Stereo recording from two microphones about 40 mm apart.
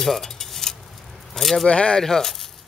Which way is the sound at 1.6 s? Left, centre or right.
Left.